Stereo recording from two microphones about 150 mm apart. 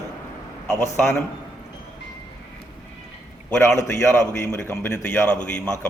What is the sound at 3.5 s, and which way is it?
A man's voice, 20° left (ahead or behind).